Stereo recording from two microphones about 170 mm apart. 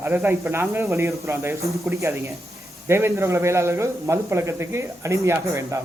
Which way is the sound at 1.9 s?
15° right (ahead or behind).